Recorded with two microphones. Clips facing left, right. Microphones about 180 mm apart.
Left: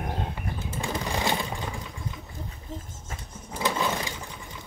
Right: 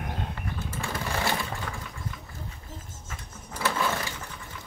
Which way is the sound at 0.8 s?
15° left (ahead or behind).